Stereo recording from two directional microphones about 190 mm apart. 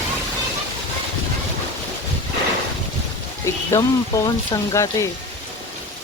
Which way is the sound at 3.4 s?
15° left (ahead or behind).